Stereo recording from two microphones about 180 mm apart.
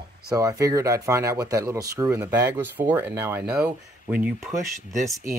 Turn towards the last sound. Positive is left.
turn(degrees=-5)  # may be behind; listen again after turning